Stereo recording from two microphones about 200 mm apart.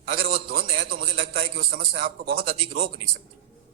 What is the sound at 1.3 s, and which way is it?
A man's voice, 45° right (ahead or behind).